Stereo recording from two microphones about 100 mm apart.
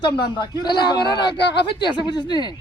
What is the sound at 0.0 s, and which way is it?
A man's voice, 45° left (ahead or behind).